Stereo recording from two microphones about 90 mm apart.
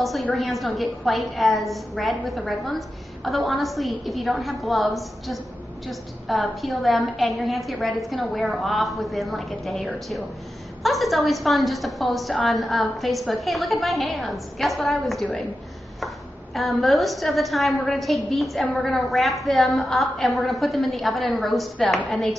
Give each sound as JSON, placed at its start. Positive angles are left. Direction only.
{"t": 0.0, "sound": "a woman's voice", "side_deg": 0}
{"t": 16.5, "sound": "a woman's voice", "side_deg": 0}
{"t": 18.7, "sound": "a woman's voice", "side_deg": 15}
{"t": 19.0, "sound": "a woman's voice", "side_deg": 0}